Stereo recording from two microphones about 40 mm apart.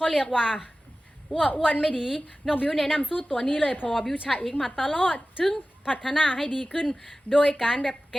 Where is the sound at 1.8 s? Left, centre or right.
Centre.